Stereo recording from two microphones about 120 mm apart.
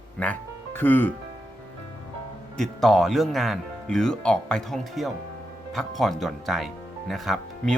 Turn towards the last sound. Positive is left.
turn(degrees=0)  # may be behind; listen again after turning